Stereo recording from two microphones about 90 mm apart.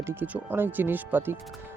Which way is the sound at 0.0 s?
25° right (ahead or behind).